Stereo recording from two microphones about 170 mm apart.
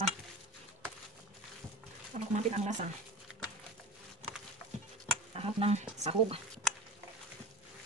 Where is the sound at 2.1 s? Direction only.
40° right (ahead or behind).